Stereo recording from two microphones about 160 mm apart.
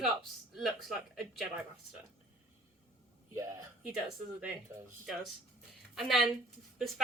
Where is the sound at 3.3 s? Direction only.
20° right (ahead or behind).